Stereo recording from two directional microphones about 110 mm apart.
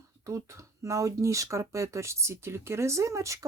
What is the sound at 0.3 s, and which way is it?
Speech, 30° right (ahead or behind).